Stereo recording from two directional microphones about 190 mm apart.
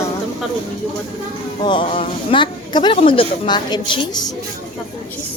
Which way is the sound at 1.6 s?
25° left (ahead or behind).